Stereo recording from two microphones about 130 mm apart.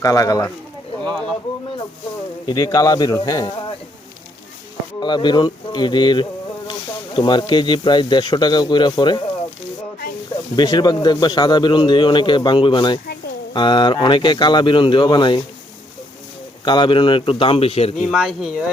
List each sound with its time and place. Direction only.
0.0 s speech: 25° left (ahead or behind)
2.5 s speech: 30° left (ahead or behind)
4.9 s speech: 35° left (ahead or behind)
10.5 s speech: 35° left (ahead or behind)
16.6 s speech: 35° left (ahead or behind)
17.9 s speech: 5° right (ahead or behind)